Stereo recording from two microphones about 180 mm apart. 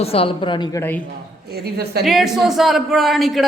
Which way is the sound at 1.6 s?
60° right (ahead or behind).